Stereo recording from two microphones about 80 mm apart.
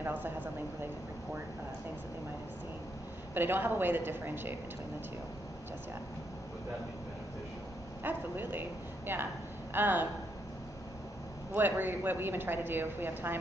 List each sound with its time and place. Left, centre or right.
0.0 s speech: right
3.3 s a woman's voice: right
8.0 s a woman's voice: right
11.5 s a woman's voice: right